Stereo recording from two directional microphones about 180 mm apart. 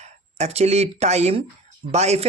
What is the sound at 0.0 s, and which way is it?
Speech, 35° right (ahead or behind).